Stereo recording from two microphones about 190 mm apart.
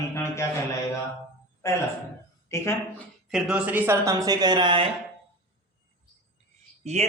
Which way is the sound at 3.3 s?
Centre (ahead or behind).